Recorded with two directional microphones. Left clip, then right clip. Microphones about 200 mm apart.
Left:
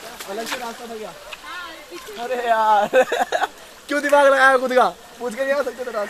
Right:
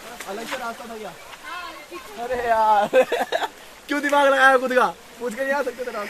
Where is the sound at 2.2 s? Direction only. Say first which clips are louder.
Left 1 dB; 5° left (ahead or behind); by 4.9 s 15° right (ahead or behind).